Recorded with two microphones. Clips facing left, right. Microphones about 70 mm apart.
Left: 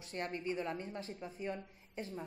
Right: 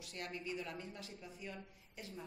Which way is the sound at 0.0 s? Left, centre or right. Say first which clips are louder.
Left 6 dB; left.